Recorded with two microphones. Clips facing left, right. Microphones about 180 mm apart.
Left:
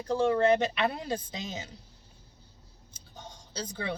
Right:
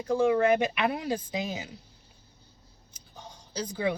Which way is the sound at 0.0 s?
10° right (ahead or behind).